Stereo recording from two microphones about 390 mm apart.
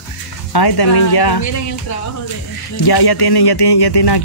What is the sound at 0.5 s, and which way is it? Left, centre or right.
Speech, left.